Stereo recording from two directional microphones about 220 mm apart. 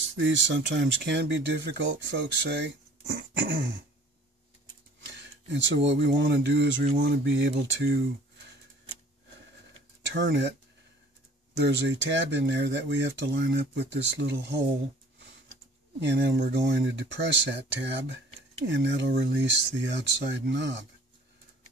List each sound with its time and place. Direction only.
0.1 s speech: 60° right (ahead or behind)
5.0 s speech: 55° right (ahead or behind)
10.1 s speech: 55° right (ahead or behind)
11.6 s speech: 55° right (ahead or behind)
16.0 s speech: 50° right (ahead or behind)